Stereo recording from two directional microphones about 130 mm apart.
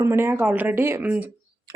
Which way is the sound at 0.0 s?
20° right (ahead or behind).